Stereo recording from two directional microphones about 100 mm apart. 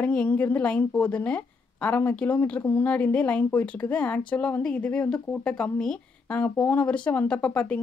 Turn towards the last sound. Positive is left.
turn(degrees=10)  # may be behind; listen again after turning